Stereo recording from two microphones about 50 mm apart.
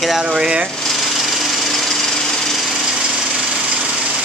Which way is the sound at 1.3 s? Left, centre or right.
Centre.